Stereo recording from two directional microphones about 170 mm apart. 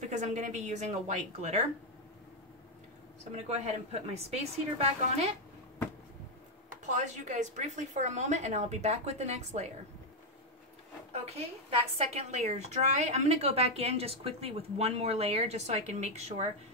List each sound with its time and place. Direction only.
0.1 s a woman's voice: 45° right (ahead or behind)
3.4 s a woman's voice: 40° right (ahead or behind)
6.9 s a woman's voice: 45° right (ahead or behind)
11.1 s a woman's voice: 35° right (ahead or behind)